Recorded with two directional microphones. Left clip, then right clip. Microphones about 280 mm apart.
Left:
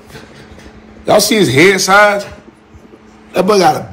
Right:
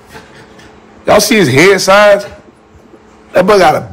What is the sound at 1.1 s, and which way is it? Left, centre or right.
A man's voice, right.